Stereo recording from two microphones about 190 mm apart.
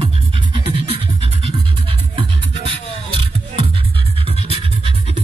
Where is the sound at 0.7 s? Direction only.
30° right (ahead or behind).